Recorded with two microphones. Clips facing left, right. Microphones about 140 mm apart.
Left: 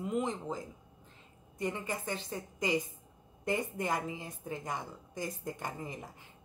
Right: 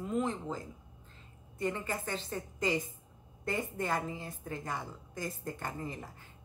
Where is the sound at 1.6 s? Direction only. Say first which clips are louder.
Right 1 dB; 15° left (ahead or behind).